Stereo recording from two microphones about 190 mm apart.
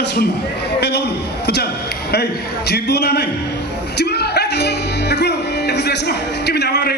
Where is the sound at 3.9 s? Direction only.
55° left (ahead or behind).